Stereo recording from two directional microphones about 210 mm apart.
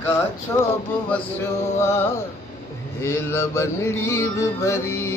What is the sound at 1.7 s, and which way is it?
Music, 10° left (ahead or behind).